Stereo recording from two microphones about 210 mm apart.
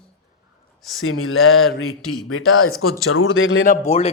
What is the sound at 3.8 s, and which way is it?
Speech, 30° left (ahead or behind).